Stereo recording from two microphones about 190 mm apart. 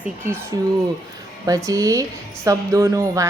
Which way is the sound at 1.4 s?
20° right (ahead or behind).